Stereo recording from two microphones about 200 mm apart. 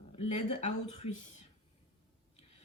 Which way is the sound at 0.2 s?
30° left (ahead or behind).